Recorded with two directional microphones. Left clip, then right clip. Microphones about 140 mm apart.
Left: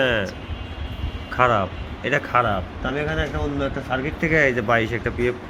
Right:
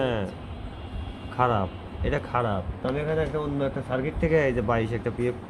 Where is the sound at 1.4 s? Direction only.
Centre (ahead or behind).